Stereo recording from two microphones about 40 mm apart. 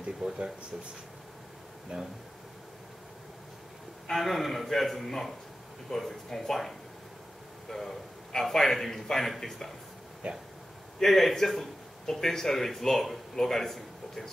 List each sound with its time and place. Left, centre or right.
0.2 s speech: right
1.9 s speech: right
4.1 s a man's voice: centre
7.7 s a man's voice: centre
10.2 s speech: right
11.0 s a man's voice: centre